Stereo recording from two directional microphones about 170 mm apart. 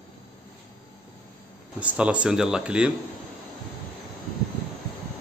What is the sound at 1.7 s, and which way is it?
Speech, 5° right (ahead or behind).